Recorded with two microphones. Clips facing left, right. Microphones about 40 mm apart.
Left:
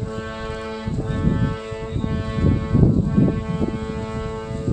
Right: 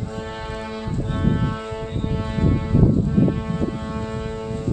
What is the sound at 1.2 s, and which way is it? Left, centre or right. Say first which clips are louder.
Music: even; centre.